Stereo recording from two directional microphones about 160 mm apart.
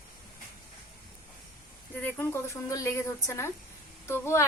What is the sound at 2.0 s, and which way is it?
A woman's voice, 10° left (ahead or behind).